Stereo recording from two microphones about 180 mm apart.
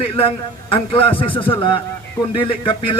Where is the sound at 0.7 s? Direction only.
30° left (ahead or behind).